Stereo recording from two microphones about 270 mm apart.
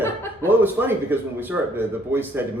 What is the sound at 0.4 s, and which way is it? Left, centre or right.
Speech, centre.